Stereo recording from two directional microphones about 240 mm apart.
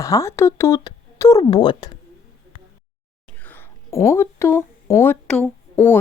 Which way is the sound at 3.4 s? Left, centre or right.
Centre.